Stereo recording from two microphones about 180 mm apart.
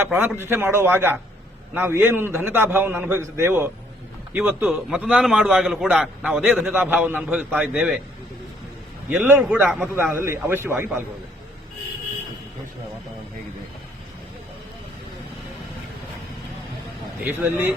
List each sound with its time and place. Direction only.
0.0 s a man's voice: 10° right (ahead or behind)
9.0 s a man's voice: 10° right (ahead or behind)
9.9 s a man's voice: 15° right (ahead or behind)
17.2 s a man's voice: 10° right (ahead or behind)